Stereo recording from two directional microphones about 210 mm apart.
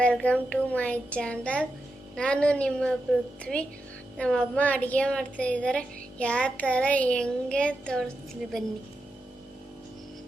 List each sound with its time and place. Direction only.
0.0 s a woman's voice: 5° left (ahead or behind)